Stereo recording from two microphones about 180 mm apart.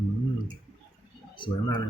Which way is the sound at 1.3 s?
25° left (ahead or behind).